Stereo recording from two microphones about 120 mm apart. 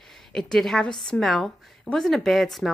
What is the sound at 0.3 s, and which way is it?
A woman's voice, 5° left (ahead or behind).